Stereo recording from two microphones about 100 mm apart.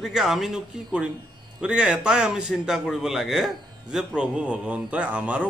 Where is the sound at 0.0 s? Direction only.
Centre (ahead or behind).